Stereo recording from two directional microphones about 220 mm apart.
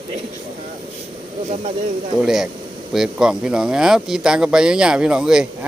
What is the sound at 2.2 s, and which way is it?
Speech, centre (ahead or behind).